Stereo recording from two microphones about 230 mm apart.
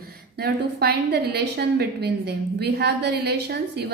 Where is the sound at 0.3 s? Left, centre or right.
Right.